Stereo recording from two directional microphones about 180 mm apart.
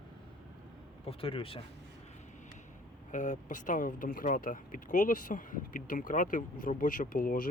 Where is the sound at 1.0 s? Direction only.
30° left (ahead or behind).